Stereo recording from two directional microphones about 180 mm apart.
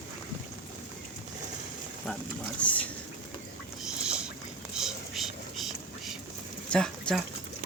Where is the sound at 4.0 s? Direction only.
5° right (ahead or behind).